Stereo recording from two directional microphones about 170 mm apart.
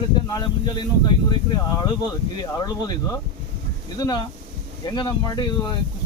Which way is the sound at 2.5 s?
25° left (ahead or behind).